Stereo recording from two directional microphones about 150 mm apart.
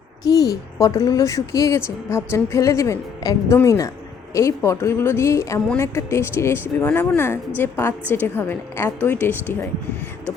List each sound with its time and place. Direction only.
0.3 s speech: 25° left (ahead or behind)